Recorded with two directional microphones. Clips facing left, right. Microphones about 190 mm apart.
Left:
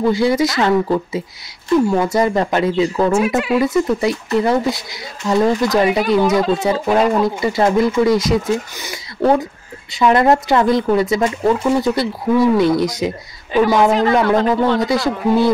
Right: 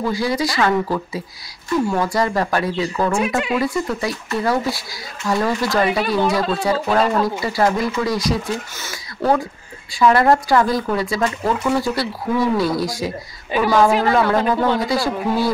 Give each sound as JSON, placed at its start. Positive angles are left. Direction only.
{"t": 0.1, "sound": "speech", "side_deg": 25}
{"t": 14.2, "sound": "speech", "side_deg": -10}
{"t": 14.8, "sound": "speech", "side_deg": 20}